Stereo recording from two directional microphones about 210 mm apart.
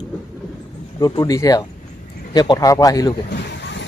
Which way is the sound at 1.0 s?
15° left (ahead or behind).